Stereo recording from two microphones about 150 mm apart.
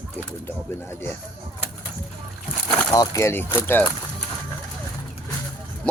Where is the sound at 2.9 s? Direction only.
25° left (ahead or behind).